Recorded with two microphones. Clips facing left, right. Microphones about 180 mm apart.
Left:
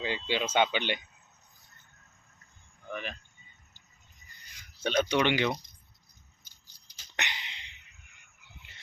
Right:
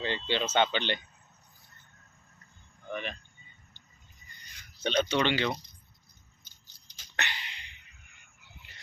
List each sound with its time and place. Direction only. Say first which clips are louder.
0.0 s speech: even; 10° left (ahead or behind)
2.9 s speech: right 2 dB; centre (ahead or behind)
4.8 s speech: left 1 dB; 10° left (ahead or behind)
6.4 s a sound: right 2 dB; 10° left (ahead or behind)